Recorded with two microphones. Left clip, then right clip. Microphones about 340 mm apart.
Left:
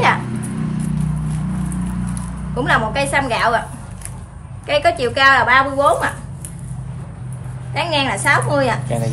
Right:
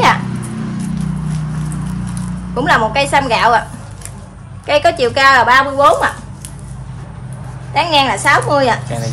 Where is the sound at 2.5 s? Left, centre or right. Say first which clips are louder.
Right 5 dB; centre.